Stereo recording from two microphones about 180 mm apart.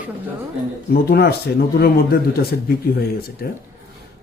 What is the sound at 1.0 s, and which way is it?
A man's voice, 60° left (ahead or behind).